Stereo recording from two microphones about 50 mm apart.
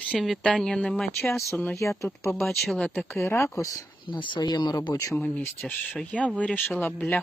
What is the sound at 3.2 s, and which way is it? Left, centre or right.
Speech, left.